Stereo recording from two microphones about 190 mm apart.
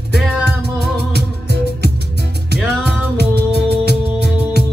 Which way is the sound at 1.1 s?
55° right (ahead or behind).